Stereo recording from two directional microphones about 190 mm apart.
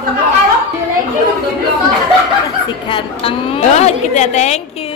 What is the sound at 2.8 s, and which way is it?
A woman's voice, 30° left (ahead or behind).